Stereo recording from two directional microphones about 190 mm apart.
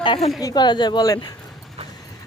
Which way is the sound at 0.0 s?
25° left (ahead or behind).